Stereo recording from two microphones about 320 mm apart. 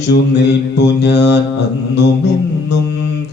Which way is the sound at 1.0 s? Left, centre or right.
Left.